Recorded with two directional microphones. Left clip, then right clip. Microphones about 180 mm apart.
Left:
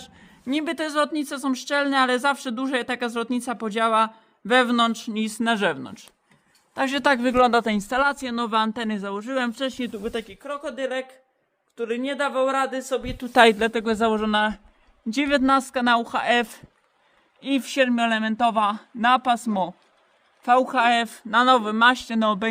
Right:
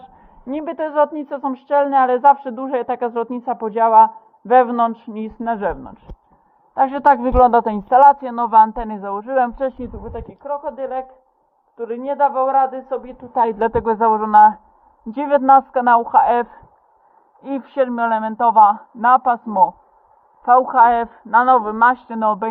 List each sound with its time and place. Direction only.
0.5 s a woman's voice: 15° left (ahead or behind)
5.4 s a woman's voice: 35° left (ahead or behind)
13.1 s a woman's voice: 60° left (ahead or behind)
13.6 s a woman's voice: 10° left (ahead or behind); by 22.4 s 25° left (ahead or behind)